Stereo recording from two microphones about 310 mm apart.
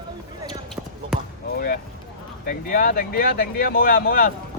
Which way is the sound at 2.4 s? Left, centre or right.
Left.